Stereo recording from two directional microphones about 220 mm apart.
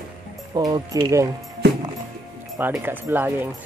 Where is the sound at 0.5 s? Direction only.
20° right (ahead or behind).